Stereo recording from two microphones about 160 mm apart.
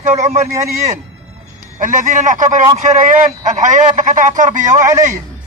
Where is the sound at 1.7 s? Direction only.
55° right (ahead or behind).